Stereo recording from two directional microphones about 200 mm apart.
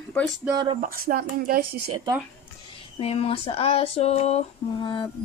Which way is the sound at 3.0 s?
30° left (ahead or behind).